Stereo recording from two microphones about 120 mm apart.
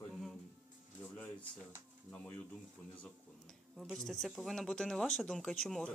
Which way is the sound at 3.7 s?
Centre (ahead or behind).